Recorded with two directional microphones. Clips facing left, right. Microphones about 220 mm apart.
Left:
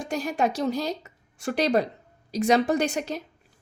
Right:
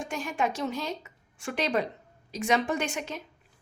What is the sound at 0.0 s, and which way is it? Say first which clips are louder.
A woman's voice: left 4 dB; 40° left (ahead or behind).